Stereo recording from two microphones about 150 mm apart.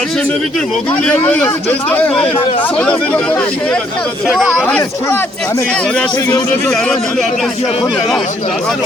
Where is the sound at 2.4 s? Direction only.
35° left (ahead or behind).